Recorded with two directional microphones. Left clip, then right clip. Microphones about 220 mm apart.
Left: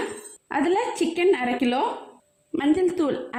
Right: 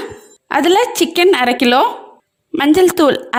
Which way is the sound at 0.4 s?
45° right (ahead or behind).